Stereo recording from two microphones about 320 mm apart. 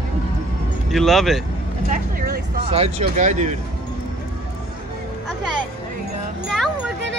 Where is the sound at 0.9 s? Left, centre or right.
Centre.